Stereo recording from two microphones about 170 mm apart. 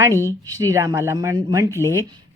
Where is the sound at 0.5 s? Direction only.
20° right (ahead or behind).